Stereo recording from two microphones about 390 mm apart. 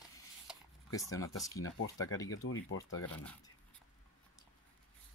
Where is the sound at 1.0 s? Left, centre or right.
Centre.